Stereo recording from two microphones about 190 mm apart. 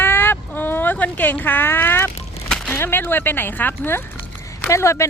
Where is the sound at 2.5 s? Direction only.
5° left (ahead or behind).